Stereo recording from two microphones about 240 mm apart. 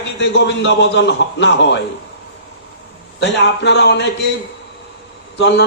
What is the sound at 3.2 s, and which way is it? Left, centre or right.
Speech, left.